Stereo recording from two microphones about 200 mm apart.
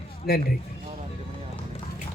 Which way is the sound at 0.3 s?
50° left (ahead or behind).